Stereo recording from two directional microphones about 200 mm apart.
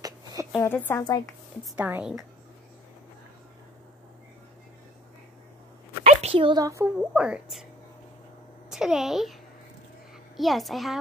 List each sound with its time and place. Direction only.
0.0 s a sound: 20° right (ahead or behind)
0.6 s a woman's voice: 10° left (ahead or behind)
1.2 s speech: 5° right (ahead or behind)
6.0 s speech: 30° right (ahead or behind); by 7.6 s 5° right (ahead or behind)
8.6 s speech: centre (ahead or behind)